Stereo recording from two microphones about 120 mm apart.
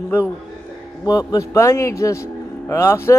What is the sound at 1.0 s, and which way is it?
A man's voice, 30° left (ahead or behind).